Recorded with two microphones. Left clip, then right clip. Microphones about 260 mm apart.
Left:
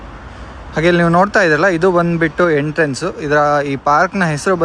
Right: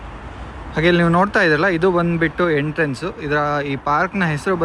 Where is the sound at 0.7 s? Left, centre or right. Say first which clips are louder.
Left 3 dB; centre.